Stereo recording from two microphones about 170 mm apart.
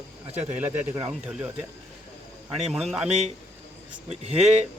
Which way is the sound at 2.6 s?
Centre (ahead or behind).